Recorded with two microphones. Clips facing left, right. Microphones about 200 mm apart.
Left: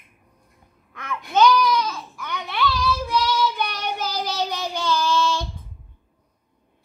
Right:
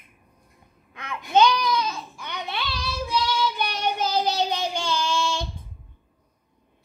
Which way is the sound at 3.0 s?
25° right (ahead or behind).